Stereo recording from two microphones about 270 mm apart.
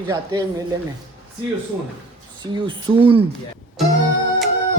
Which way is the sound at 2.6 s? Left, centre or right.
Centre.